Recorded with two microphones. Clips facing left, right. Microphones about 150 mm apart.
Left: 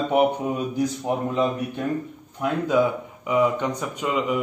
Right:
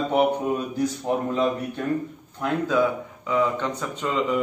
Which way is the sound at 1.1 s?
15° left (ahead or behind).